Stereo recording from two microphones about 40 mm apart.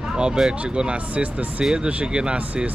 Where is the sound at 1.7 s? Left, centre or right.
Right.